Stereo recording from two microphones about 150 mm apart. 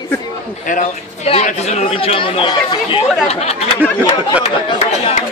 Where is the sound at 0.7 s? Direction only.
55° left (ahead or behind).